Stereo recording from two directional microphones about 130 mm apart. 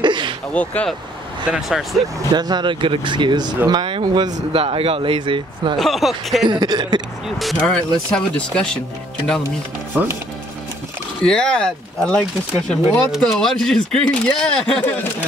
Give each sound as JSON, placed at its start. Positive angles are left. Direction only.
{"t": 0.0, "sound": "a sound", "side_deg": -35}
{"t": 0.5, "sound": "speech", "side_deg": 10}
{"t": 1.5, "sound": "speech", "side_deg": -5}
{"t": 2.3, "sound": "speech", "side_deg": -35}
{"t": 4.5, "sound": "speech", "side_deg": -45}
{"t": 5.8, "sound": "speech", "side_deg": 0}
{"t": 6.5, "sound": "speech", "side_deg": -35}
{"t": 7.2, "sound": "speech", "side_deg": 0}
{"t": 9.9, "sound": "speech", "side_deg": -15}
{"t": 11.2, "sound": "speech", "side_deg": 5}